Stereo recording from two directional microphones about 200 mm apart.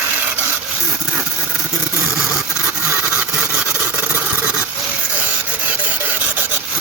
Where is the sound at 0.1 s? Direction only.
10° right (ahead or behind).